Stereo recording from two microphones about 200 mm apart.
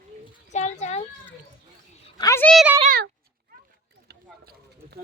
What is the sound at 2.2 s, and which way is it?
Speech, 15° left (ahead or behind).